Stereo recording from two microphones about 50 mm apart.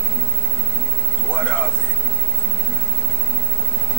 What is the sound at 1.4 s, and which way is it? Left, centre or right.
Speech, left.